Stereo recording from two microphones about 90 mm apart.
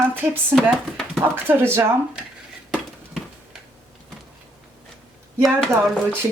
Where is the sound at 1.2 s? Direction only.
20° right (ahead or behind).